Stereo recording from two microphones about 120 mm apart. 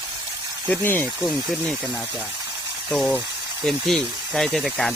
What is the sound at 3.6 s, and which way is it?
Speech, centre (ahead or behind).